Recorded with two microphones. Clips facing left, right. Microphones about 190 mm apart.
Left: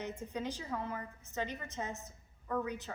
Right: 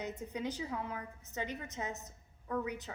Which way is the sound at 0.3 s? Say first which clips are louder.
Even; 15° right (ahead or behind).